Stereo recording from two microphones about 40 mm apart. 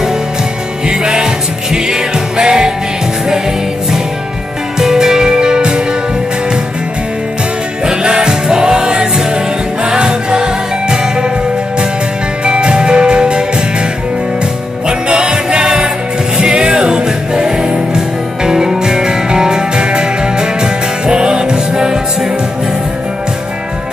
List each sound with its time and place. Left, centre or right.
0.8 s music: centre
4.7 s music: centre
7.8 s music: centre
12.4 s music: right
14.9 s music: right